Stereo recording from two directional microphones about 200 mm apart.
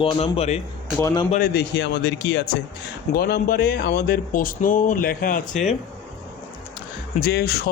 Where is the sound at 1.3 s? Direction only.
50° left (ahead or behind).